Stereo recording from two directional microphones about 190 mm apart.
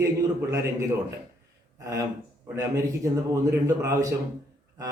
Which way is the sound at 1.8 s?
15° right (ahead or behind).